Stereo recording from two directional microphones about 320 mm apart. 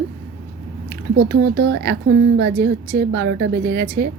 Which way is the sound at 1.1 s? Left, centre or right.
Right.